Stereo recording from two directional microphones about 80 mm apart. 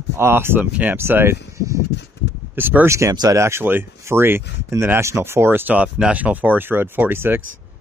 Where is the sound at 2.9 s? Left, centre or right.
Right.